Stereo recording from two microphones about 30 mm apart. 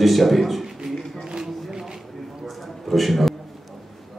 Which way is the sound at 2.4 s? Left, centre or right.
Centre.